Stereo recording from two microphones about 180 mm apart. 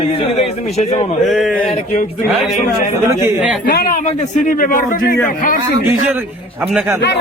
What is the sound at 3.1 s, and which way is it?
Speech, 5° right (ahead or behind).